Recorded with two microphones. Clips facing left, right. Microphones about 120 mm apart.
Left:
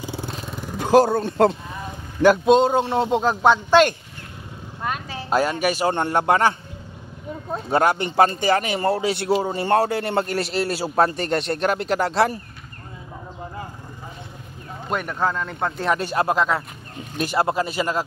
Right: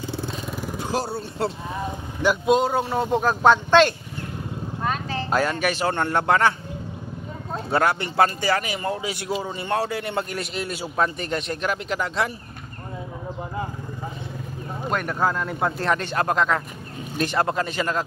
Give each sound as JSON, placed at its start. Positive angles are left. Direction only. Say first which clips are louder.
{"t": 0.7, "sound": "speech", "louder": "left 12 dB", "side_deg": 60}
{"t": 2.4, "sound": "speech", "louder": "left 4 dB", "side_deg": 25}
{"t": 4.8, "sound": "speech", "louder": "right 1 dB", "side_deg": 10}
{"t": 7.7, "sound": "speech", "louder": "left 3 dB", "side_deg": 20}
{"t": 8.5, "sound": "a man's voice", "louder": "left 5 dB", "side_deg": 35}
{"t": 8.9, "sound": "a man's voice", "louder": "left 6 dB", "side_deg": 65}
{"t": 9.5, "sound": "a man's voice", "louder": "left 6 dB", "side_deg": 45}
{"t": 14.9, "sound": "speech", "louder": "even", "side_deg": 0}
{"t": 15.9, "sound": "a man's voice", "louder": "left 5 dB", "side_deg": 10}